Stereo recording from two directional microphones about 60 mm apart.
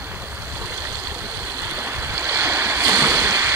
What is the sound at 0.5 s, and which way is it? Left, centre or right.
Stream, right.